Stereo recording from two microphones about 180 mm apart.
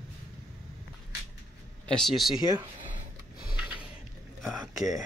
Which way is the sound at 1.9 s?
Centre (ahead or behind).